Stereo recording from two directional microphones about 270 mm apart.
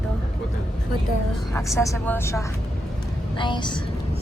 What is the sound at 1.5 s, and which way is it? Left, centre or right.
Speech, centre.